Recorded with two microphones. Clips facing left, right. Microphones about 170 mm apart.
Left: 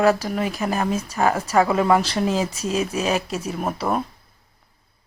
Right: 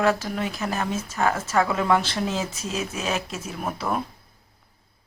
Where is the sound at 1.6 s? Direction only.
35° left (ahead or behind).